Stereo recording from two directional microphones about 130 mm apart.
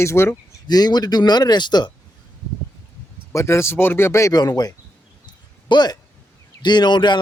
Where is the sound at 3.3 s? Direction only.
20° left (ahead or behind); by 7.2 s 35° left (ahead or behind).